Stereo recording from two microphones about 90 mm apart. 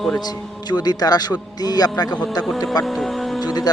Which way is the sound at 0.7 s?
50° left (ahead or behind).